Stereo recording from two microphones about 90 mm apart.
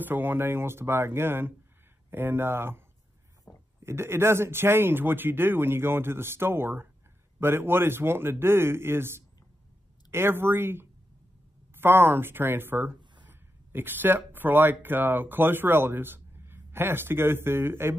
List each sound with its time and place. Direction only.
0.0 s speech: 20° right (ahead or behind)
3.5 s a sound: 40° left (ahead or behind)
3.8 s speech: 30° right (ahead or behind)